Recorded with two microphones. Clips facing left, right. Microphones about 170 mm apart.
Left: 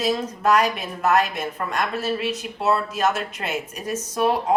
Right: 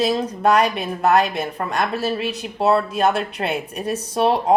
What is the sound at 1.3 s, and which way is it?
Speech, 35° right (ahead or behind).